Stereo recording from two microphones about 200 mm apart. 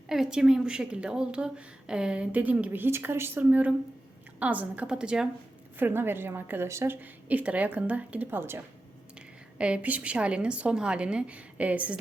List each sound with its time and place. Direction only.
0.1 s a woman's voice: 5° right (ahead or behind)